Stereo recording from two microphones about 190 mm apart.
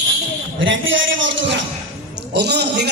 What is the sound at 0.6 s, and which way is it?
Speech, 85° right.